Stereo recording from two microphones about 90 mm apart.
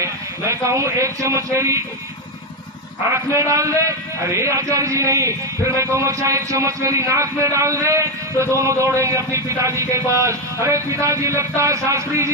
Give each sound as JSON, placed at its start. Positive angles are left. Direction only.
{"t": 0.0, "sound": "speech", "side_deg": -35}
{"t": 3.3, "sound": "a man's voice", "side_deg": -35}